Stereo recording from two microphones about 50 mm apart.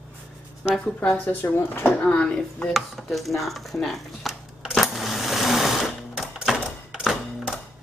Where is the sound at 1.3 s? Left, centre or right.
Left.